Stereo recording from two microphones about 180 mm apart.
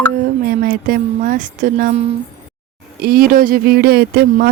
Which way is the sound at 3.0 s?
55° right (ahead or behind).